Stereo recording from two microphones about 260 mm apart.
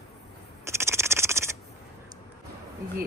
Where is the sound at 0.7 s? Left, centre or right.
Centre.